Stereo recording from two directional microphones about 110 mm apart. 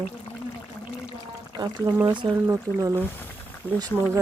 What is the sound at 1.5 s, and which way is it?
Speech, 35° right (ahead or behind).